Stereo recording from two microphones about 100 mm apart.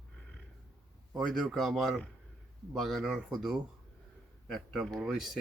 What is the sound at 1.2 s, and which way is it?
Speech, centre (ahead or behind).